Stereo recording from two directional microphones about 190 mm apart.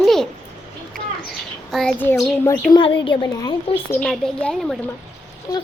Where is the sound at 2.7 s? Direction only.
25° left (ahead or behind).